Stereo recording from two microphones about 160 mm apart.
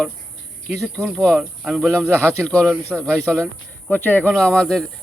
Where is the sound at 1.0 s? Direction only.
5° left (ahead or behind).